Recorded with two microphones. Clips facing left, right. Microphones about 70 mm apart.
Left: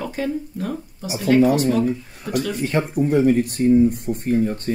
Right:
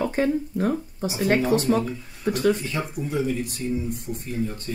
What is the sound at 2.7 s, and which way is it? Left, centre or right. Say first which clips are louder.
Speech: left 8 dB; left.